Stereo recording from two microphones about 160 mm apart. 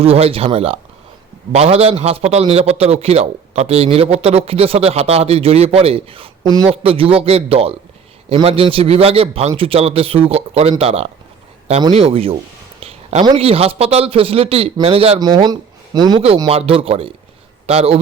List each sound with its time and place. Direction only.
0.0 s a man's voice: 35° right (ahead or behind)
6.7 s a man's voice: 35° right (ahead or behind)
12.8 s a sound: 40° right (ahead or behind)
13.2 s a man's voice: 35° right (ahead or behind)
16.5 s a man's voice: 35° right (ahead or behind)